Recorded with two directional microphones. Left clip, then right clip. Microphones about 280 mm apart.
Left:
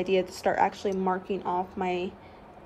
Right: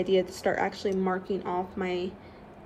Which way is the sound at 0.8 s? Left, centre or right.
Centre.